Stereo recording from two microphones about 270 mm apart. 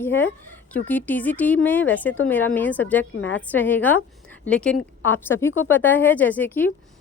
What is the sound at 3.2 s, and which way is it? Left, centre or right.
Speech, left.